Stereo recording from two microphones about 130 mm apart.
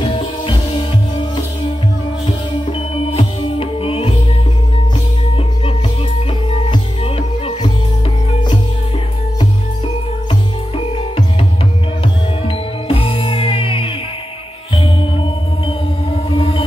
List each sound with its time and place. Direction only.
0.0 s music: 45° left (ahead or behind)
3.2 s music: 45° left (ahead or behind)
6.6 s music: 45° left (ahead or behind)
12.4 s music: 45° left (ahead or behind)
16.3 s music: 45° left (ahead or behind)